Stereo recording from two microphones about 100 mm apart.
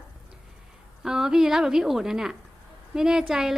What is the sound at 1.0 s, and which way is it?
A woman's voice, 5° right (ahead or behind).